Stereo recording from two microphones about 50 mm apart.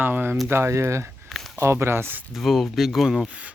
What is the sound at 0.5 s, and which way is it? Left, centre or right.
Speech, right.